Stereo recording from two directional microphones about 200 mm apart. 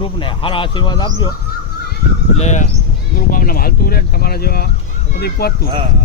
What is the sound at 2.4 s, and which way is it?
Speech, 35° left (ahead or behind).